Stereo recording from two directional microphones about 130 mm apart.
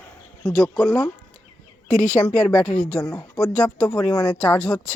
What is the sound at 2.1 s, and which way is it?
Speech, 10° left (ahead or behind).